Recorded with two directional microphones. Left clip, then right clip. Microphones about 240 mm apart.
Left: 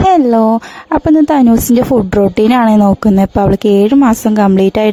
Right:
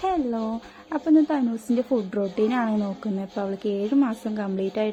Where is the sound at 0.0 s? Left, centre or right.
Left.